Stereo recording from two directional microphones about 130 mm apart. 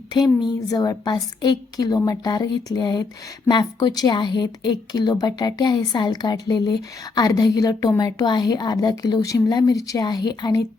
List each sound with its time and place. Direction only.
0.1 s speech: 35° left (ahead or behind)